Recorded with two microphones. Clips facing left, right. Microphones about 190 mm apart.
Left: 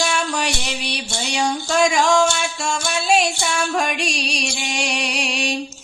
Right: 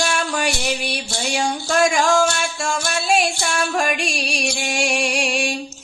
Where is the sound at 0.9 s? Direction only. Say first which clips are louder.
Right 2 dB; centre (ahead or behind).